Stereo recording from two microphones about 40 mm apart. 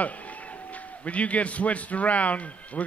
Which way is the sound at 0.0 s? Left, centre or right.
Left.